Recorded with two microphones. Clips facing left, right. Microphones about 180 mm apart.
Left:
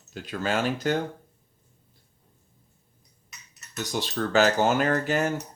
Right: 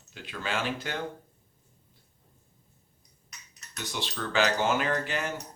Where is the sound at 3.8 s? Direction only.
40° left (ahead or behind).